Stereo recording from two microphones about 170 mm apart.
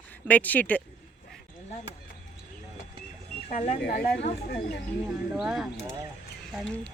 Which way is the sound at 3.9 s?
60° left (ahead or behind).